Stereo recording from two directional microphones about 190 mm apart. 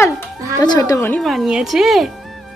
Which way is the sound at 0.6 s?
20° left (ahead or behind).